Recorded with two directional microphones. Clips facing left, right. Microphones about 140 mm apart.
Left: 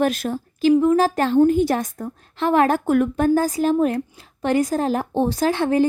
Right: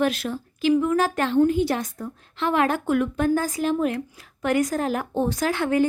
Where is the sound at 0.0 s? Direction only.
45° left (ahead or behind).